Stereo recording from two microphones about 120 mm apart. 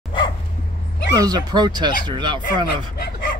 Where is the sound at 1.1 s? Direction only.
35° right (ahead or behind).